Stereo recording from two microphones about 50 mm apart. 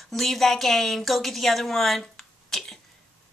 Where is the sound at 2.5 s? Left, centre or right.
Centre.